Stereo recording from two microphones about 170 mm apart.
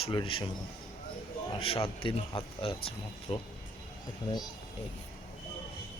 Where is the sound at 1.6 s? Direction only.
35° left (ahead or behind).